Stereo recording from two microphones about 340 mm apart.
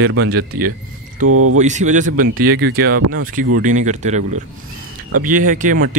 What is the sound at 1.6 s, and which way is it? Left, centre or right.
Speech, right.